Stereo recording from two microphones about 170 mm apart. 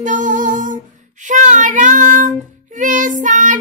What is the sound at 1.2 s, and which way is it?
Music, 50° right (ahead or behind).